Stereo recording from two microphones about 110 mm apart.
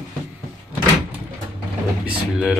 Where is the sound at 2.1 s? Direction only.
10° right (ahead or behind).